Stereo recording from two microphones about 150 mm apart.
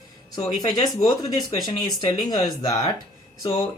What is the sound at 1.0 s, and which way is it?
Speech, 30° left (ahead or behind).